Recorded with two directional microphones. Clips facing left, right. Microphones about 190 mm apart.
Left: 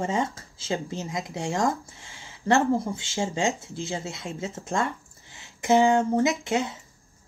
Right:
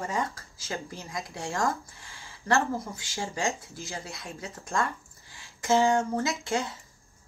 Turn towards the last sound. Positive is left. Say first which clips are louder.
# left 5 dB
turn(degrees=20)  # may be behind; listen again after turning